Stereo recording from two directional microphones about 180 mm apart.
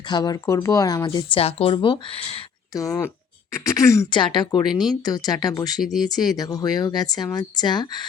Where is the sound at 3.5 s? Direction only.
15° left (ahead or behind).